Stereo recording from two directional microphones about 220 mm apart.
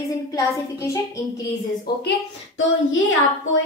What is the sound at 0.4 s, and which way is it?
Speech, 15° left (ahead or behind).